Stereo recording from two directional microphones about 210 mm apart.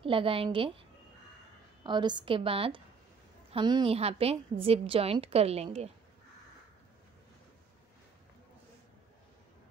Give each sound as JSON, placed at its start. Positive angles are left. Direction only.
{"t": 0.0, "sound": "a woman's voice", "side_deg": -25}